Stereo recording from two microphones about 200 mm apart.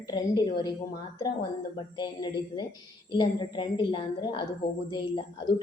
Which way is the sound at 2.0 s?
20° left (ahead or behind).